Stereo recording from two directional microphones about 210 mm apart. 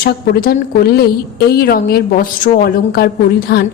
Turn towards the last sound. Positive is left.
turn(degrees=45)  # may be behind; listen again after turning